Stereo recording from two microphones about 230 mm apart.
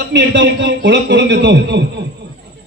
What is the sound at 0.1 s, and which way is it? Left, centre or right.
A man's voice, right.